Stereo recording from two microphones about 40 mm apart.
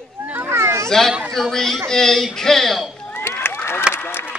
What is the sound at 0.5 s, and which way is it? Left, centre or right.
Children playing, right.